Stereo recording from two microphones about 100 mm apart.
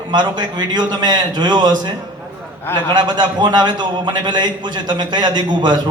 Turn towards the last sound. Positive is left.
turn(degrees=-50)  # may be behind; listen again after turning